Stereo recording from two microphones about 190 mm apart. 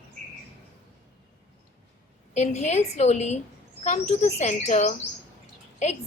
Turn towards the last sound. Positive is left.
turn(degrees=35)  # may be behind; listen again after turning